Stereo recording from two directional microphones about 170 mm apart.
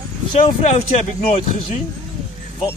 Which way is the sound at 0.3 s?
35° left (ahead or behind).